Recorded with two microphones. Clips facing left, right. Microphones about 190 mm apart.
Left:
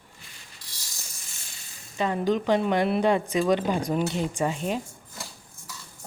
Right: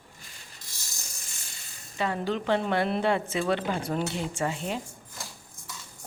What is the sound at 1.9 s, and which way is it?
A woman's voice, 20° left (ahead or behind).